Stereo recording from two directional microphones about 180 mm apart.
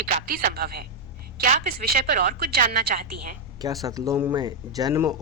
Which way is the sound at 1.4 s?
50° right (ahead or behind).